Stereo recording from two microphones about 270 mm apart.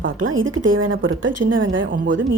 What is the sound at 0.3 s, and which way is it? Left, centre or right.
A woman's voice, right.